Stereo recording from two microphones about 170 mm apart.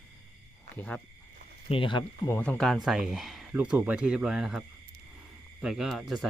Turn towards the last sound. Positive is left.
turn(degrees=0)  # may be behind; listen again after turning